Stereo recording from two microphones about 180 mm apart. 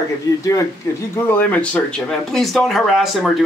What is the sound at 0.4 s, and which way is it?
Speech, 20° left (ahead or behind).